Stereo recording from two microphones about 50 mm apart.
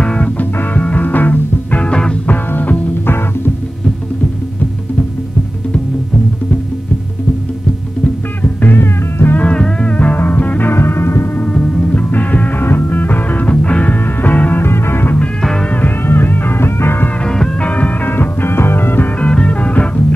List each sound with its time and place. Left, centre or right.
0.0 s music: left
0.4 s music: left
1.8 s music: centre
2.2 s music: left
8.6 s music: left
9.4 s music: centre
9.9 s music: left
10.7 s music: left
11.5 s music: centre
14.6 s music: left
17.6 s music: left
18.1 s music: left
19.1 s music: left